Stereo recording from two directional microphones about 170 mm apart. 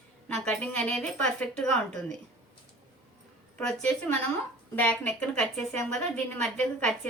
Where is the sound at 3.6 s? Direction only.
5° left (ahead or behind).